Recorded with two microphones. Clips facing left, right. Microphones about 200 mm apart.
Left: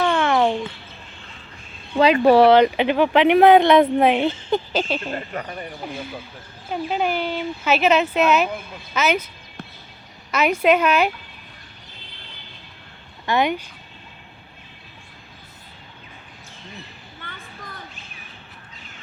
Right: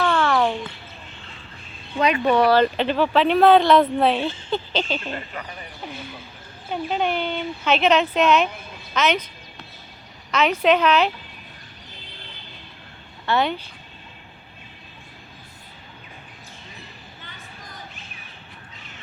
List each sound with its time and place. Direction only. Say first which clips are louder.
0.0 s music: left 2 dB; 20° left (ahead or behind)
2.0 s speech: left 5 dB; 35° left (ahead or behind)
2.6 s speech: left 3 dB; 15° left (ahead or behind)
5.1 s speech: left 4 dB; 45° left (ahead or behind)
6.7 s speech: left 1 dB; 5° left (ahead or behind)
10.3 s speech: left 1 dB; 10° left (ahead or behind)
13.2 s speech: left 1 dB; 15° left (ahead or behind)
17.2 s a sound: left 8 dB; 55° left (ahead or behind)